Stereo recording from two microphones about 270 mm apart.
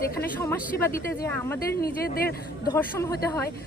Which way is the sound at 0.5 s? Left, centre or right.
Centre.